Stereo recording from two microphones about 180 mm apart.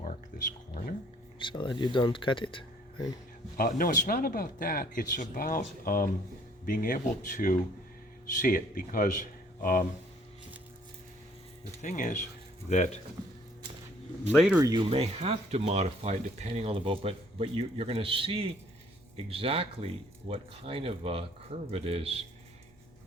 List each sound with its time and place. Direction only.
0.7 s speech: 50° left (ahead or behind)
1.4 s speech: 25° left (ahead or behind)
3.6 s speech: 50° left (ahead or behind)
11.8 s speech: 45° left (ahead or behind)
14.3 s speech: 5° right (ahead or behind)
14.6 s speech: 25° right (ahead or behind)